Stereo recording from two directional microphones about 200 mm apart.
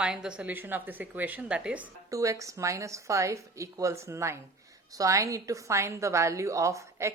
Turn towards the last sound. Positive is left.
turn(degrees=-15)  # may be behind; listen again after turning